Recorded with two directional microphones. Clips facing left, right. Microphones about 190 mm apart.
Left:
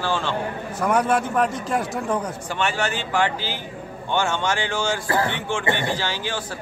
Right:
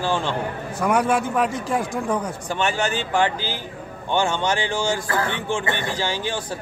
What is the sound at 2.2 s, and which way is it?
A man's voice, 15° right (ahead or behind).